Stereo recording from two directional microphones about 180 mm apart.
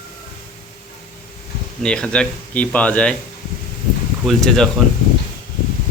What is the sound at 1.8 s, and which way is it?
Speech, 5° left (ahead or behind).